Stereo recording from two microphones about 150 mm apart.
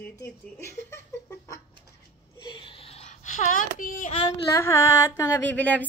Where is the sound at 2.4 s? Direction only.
35° left (ahead or behind); by 4.1 s 60° left (ahead or behind).